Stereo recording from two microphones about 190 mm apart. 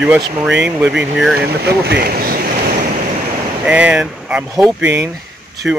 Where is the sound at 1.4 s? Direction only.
60° right (ahead or behind).